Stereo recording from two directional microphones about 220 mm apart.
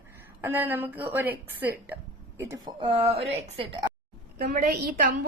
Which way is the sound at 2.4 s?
20° right (ahead or behind).